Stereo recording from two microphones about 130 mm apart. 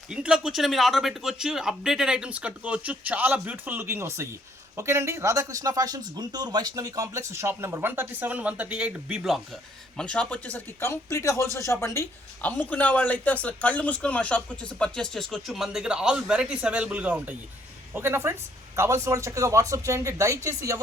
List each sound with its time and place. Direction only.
0.1 s speech: 5° right (ahead or behind)
10.0 s speech: 10° left (ahead or behind); by 20.8 s 25° right (ahead or behind)